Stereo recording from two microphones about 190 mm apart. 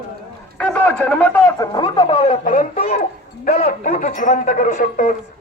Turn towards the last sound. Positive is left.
turn(degrees=40)  # may be behind; listen again after turning